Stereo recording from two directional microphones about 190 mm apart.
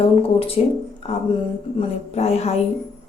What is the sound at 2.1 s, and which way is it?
Speech, 35° left (ahead or behind).